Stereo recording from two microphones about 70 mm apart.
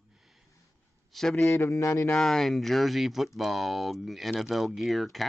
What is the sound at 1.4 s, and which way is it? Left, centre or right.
Speech, left.